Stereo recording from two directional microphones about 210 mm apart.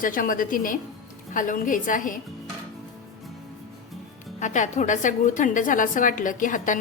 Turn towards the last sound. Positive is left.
turn(degrees=40)  # may be behind; listen again after turning